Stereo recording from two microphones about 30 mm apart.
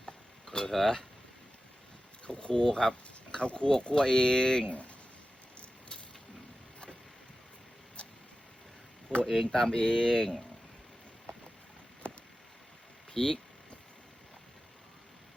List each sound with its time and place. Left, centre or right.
0.7 s speech: centre
2.2 s speech: left
8.0 s vehicle: left
9.2 s speech: centre
9.7 s speech: left
12.0 s a sound: left
13.1 s speech: left